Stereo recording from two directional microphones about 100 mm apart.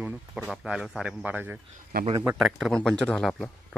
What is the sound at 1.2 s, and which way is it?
Speech, 15° right (ahead or behind).